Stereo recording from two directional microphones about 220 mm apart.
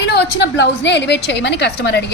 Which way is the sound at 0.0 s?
50° left (ahead or behind).